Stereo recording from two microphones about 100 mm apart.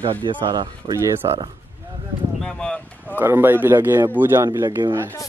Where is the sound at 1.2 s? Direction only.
40° right (ahead or behind).